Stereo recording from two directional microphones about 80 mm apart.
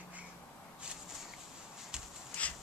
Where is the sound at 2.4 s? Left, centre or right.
Centre.